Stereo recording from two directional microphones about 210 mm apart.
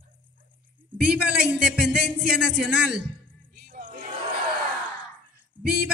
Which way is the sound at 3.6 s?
45° right (ahead or behind).